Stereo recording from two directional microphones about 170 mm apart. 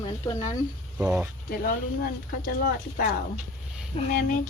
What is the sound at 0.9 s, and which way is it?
Speech, 5° right (ahead or behind).